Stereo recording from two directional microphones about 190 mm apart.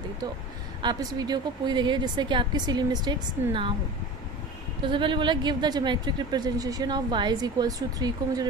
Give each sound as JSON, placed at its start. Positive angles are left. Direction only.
{"t": 0.8, "sound": "speech", "side_deg": -20}
{"t": 4.8, "sound": "speech", "side_deg": -25}